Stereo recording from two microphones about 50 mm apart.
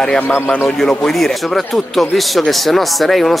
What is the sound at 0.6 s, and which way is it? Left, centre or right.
Speech, centre.